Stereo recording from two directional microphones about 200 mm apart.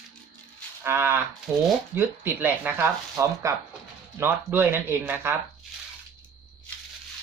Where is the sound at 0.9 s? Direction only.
10° right (ahead or behind).